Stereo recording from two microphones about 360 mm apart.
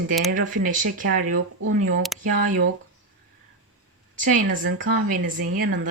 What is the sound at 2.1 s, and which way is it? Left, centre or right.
Speech, centre.